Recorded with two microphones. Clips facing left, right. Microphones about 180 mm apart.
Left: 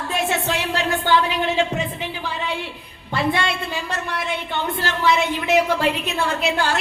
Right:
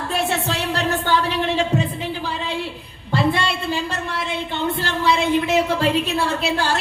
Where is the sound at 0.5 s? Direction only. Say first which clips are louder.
Even; 35° right (ahead or behind).